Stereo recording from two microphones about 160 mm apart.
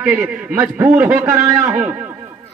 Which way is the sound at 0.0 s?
15° right (ahead or behind).